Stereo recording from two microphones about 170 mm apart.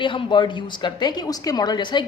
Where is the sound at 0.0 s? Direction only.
30° left (ahead or behind).